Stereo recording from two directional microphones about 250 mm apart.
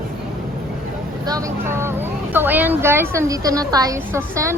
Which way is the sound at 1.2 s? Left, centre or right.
Centre.